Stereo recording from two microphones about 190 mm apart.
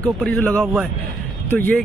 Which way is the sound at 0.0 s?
5° left (ahead or behind).